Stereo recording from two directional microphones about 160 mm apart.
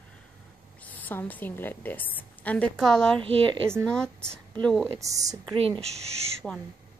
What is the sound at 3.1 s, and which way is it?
Speech, 35° right (ahead or behind).